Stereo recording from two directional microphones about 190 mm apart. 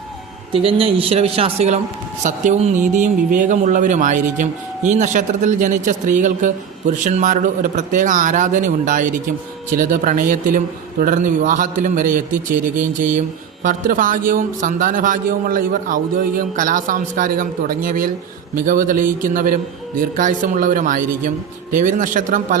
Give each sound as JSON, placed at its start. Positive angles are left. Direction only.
{"t": 0.5, "sound": "speech", "side_deg": -30}